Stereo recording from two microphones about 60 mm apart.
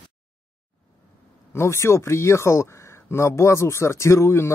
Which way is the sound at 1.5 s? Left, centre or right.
Left.